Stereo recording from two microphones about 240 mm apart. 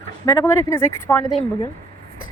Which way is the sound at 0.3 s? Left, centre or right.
Centre.